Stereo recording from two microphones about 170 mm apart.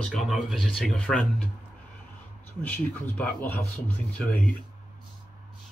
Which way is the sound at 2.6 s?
10° left (ahead or behind).